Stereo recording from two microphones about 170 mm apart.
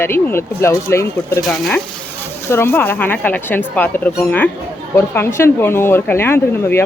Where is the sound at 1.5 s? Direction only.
Centre (ahead or behind).